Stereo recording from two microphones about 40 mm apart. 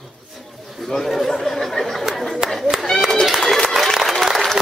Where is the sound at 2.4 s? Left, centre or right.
Centre.